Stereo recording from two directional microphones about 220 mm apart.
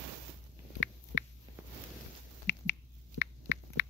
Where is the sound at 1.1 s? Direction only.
55° left (ahead or behind).